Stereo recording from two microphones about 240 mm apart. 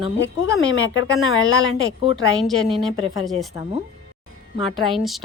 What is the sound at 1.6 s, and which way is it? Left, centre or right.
Speech, right.